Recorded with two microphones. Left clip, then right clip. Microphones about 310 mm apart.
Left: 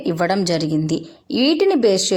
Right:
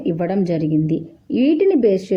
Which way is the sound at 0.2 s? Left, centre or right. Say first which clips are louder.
Left 2 dB; right.